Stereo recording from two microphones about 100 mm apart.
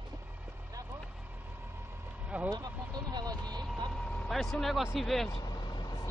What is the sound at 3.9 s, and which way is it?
Speech, 5° left (ahead or behind).